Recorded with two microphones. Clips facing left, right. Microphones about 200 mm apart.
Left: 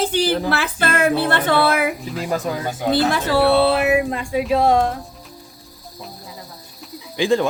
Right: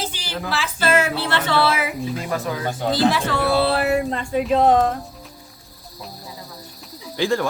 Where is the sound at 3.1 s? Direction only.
35° left (ahead or behind).